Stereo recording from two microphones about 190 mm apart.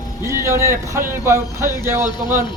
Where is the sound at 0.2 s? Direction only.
15° right (ahead or behind).